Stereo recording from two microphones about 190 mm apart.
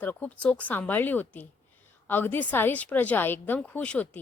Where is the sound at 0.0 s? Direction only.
10° left (ahead or behind).